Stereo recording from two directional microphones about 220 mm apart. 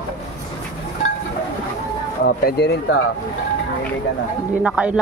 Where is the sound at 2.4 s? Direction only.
45° left (ahead or behind).